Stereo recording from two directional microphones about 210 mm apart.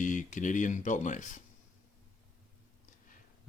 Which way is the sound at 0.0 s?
35° left (ahead or behind).